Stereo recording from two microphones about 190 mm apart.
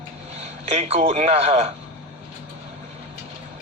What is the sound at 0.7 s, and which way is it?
Speech, 35° right (ahead or behind).